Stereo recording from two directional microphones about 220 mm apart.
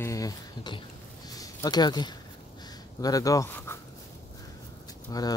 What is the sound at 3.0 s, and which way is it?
Speech, 15° left (ahead or behind).